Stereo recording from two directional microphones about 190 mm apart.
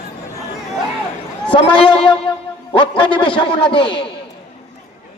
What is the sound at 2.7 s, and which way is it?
A man's voice, 25° left (ahead or behind).